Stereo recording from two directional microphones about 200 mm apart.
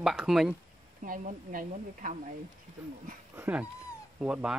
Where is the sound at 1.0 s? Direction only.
40° right (ahead or behind).